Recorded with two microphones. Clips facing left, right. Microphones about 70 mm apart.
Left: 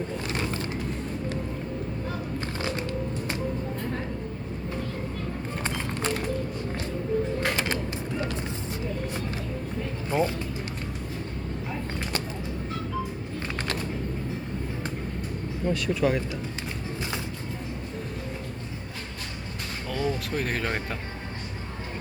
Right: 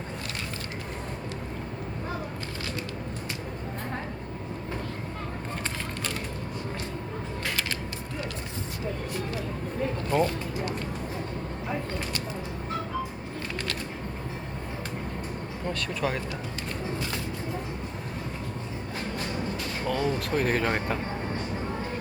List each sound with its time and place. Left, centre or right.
10.1 s a sound: centre
15.7 s speech: centre
19.9 s speech: centre